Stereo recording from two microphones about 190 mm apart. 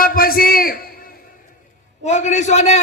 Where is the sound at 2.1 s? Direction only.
40° left (ahead or behind).